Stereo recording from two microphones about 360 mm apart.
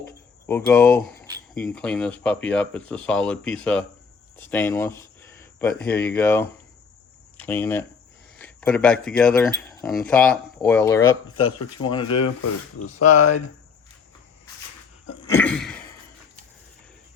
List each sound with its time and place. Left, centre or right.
0.4 s speech: centre
13.0 s speech: left
15.2 s a sound: centre